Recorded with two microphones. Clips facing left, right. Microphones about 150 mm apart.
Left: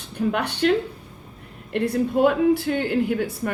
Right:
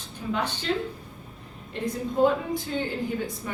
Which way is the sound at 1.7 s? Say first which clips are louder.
Left 7 dB; 70° left (ahead or behind).